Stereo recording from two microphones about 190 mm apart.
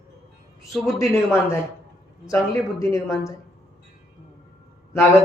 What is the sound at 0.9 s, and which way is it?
Speech, 15° left (ahead or behind).